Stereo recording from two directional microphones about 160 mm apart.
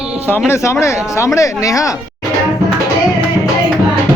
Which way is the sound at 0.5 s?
20° left (ahead or behind).